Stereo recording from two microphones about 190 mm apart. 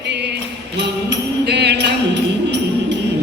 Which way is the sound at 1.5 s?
60° right (ahead or behind).